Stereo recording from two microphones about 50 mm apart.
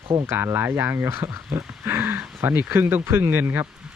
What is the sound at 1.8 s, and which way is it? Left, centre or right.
Speech, right.